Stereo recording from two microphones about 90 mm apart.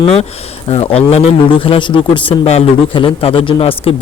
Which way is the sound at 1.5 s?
90° left.